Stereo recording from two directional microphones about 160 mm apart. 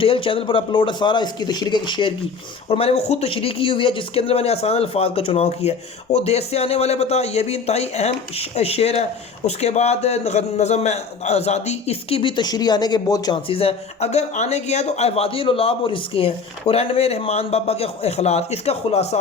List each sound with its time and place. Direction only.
0.0 s a man's voice: 35° left (ahead or behind)